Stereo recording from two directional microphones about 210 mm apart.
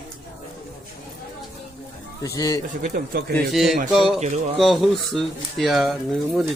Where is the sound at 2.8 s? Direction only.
45° right (ahead or behind).